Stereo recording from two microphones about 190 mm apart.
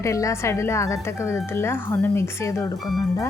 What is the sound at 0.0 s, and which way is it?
Speech, 15° left (ahead or behind).